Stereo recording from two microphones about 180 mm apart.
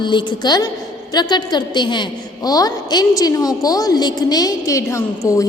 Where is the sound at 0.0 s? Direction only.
25° left (ahead or behind).